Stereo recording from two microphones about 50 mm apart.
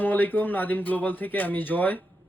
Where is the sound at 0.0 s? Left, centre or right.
Left.